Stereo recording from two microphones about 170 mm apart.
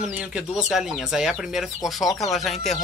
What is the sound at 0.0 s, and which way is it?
Speech, 5° right (ahead or behind).